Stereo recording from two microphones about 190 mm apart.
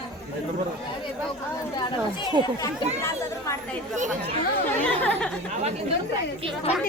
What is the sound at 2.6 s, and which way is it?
Speech, 15° left (ahead or behind).